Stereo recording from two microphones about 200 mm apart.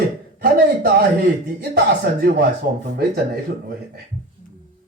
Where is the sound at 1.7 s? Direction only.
50° right (ahead or behind).